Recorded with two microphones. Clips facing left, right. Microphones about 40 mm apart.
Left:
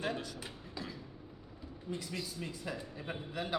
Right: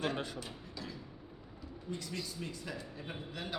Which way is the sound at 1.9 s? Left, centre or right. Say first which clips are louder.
Left 1 dB; centre.